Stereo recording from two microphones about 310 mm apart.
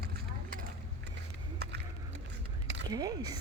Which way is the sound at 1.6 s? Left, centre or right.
Right.